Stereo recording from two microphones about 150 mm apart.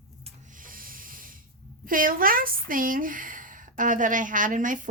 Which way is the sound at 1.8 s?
70° right (ahead or behind).